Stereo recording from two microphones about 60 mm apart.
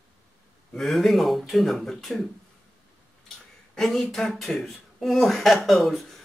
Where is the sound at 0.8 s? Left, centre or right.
Centre.